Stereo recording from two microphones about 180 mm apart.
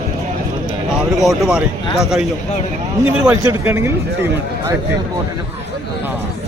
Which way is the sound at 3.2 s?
15° right (ahead or behind).